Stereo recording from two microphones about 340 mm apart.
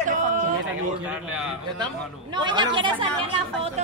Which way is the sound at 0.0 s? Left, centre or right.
Right.